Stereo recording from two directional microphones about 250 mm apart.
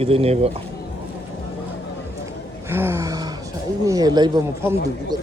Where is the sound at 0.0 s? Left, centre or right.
Right.